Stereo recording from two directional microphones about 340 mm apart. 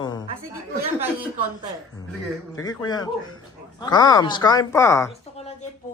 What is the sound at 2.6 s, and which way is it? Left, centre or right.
A man's voice, centre.